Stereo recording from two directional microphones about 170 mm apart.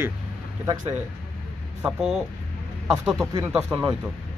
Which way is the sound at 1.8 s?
5° right (ahead or behind).